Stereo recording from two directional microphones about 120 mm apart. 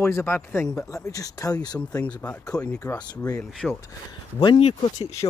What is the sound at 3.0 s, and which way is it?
Speech, 35° left (ahead or behind).